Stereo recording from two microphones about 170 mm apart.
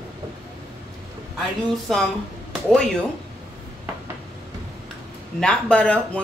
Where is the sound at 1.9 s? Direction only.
Centre (ahead or behind).